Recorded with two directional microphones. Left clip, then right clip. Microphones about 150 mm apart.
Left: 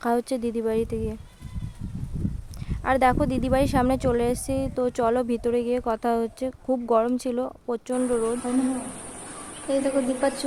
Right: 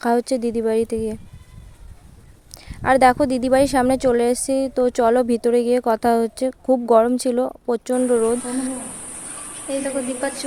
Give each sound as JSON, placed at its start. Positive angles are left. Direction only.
{"t": 0.0, "sound": "a woman's voice", "side_deg": -25}
{"t": 2.6, "sound": "speech", "side_deg": -30}
{"t": 9.6, "sound": "speech", "side_deg": 15}